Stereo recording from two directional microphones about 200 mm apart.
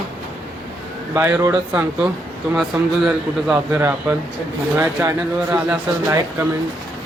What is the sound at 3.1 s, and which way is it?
Speech, 5° right (ahead or behind).